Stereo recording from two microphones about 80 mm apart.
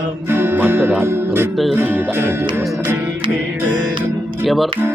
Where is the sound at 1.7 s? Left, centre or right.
Right.